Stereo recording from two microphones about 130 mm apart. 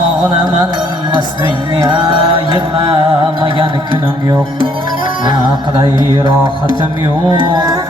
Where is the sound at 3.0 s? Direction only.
40° right (ahead or behind).